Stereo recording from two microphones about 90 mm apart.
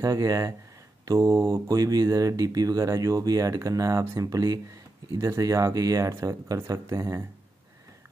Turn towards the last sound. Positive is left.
turn(degrees=-35)  # may be behind; listen again after turning